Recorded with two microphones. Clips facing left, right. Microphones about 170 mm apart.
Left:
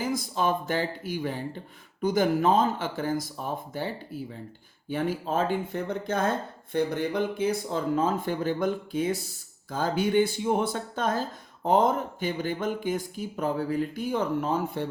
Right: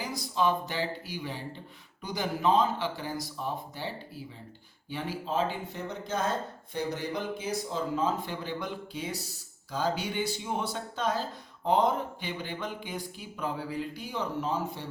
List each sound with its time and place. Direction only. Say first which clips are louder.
0.0 s speech: left 2 dB; 50° left (ahead or behind)